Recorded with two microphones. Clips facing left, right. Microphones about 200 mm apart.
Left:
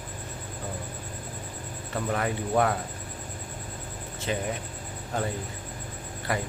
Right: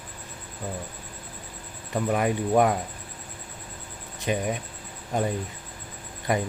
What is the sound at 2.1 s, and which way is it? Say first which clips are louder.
Speech: right 4 dB; 15° right (ahead or behind).